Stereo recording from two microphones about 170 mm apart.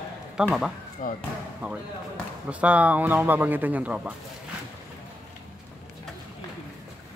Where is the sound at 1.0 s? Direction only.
50° left (ahead or behind).